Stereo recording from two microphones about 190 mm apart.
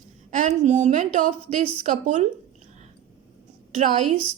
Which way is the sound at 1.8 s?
40° right (ahead or behind).